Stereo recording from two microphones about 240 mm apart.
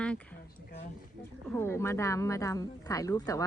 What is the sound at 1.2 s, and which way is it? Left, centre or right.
Speech, centre.